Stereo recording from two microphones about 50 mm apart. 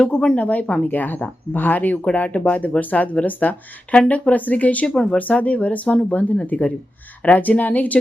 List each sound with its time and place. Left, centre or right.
0.0 s speech: centre
0.3 s speech: left